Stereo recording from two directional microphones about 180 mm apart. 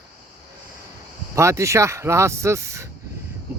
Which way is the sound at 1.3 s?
15° right (ahead or behind).